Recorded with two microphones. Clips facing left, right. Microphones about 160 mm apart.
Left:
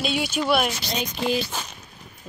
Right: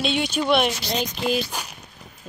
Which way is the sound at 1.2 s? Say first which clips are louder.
Even; 10° right (ahead or behind).